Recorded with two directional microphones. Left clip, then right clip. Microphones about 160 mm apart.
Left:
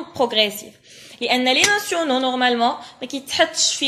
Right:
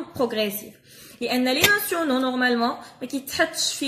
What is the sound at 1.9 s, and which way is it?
Speech, 35° right (ahead or behind).